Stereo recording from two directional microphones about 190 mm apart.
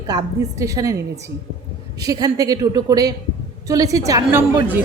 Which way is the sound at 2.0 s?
20° right (ahead or behind).